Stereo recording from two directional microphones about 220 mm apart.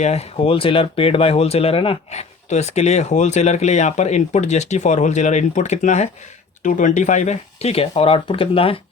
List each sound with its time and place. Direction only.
0.0 s speech: 30° left (ahead or behind)